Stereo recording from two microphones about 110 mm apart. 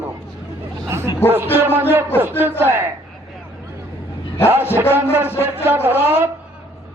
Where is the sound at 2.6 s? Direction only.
20° right (ahead or behind).